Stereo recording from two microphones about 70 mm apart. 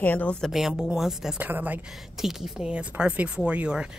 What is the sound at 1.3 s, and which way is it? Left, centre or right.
Speech, right.